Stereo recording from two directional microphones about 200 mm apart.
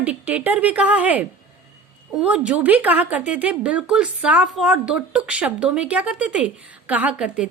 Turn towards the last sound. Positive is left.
turn(degrees=-5)  # may be behind; listen again after turning